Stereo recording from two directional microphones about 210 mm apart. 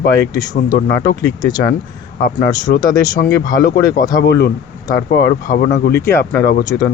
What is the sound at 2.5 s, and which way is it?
Speech, 20° left (ahead or behind).